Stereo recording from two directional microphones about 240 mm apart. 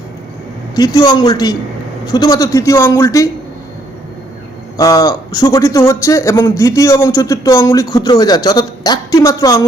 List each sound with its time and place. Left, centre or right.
0.8 s a man's voice: centre
4.8 s a man's voice: centre